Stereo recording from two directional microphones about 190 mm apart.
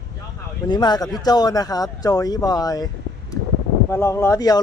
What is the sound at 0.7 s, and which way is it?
Speech, 20° left (ahead or behind).